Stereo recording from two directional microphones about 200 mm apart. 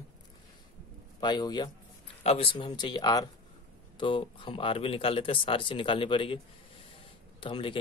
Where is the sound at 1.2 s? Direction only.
20° left (ahead or behind).